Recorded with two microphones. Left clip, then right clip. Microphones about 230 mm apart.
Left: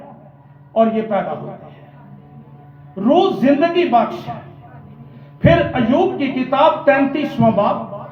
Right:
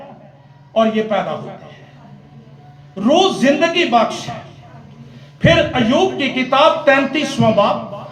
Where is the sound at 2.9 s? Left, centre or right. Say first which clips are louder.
Right 1 dB; right.